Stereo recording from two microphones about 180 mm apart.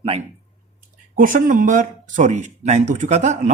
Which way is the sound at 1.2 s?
50° right (ahead or behind).